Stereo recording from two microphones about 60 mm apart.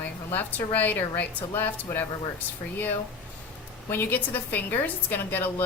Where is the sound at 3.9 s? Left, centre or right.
Left.